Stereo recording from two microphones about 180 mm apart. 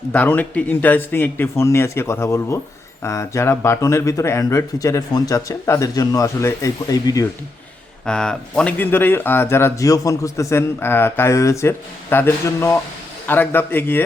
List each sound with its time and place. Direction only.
0.1 s speech: 10° left (ahead or behind)
8.0 s speech: 5° left (ahead or behind)